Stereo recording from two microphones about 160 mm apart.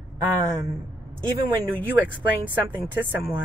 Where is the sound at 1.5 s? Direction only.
20° right (ahead or behind).